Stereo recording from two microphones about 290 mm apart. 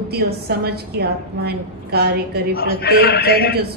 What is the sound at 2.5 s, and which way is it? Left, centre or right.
A woman's voice, left.